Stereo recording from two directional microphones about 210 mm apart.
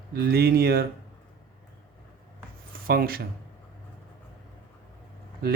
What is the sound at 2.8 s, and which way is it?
Speech, 45° right (ahead or behind).